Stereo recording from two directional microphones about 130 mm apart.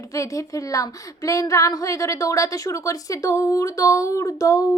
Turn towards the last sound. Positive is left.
turn(degrees=25)  # may be behind; listen again after turning